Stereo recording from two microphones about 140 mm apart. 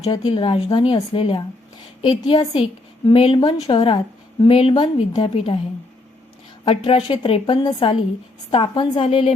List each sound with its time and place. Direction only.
0.0 s a woman's voice: 40° left (ahead or behind)
5.3 s a woman's voice: 45° left (ahead or behind)
6.7 s a woman's voice: 40° left (ahead or behind)